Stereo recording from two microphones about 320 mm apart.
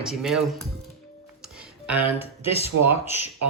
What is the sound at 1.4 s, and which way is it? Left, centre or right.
Music, centre.